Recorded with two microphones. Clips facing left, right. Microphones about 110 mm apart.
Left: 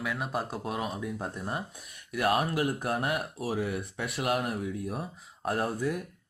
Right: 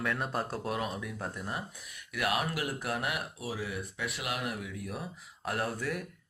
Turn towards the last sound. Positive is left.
turn(degrees=20)  # may be behind; listen again after turning